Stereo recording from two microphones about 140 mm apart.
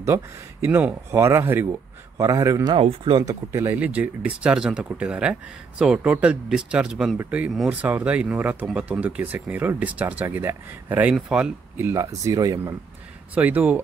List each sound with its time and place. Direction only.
0.0 s speech: 20° right (ahead or behind)
2.7 s speech: 40° right (ahead or behind)
3.2 s speech: 30° right (ahead or behind)
3.6 s speech: 10° right (ahead or behind)
13.3 s speech: 10° right (ahead or behind)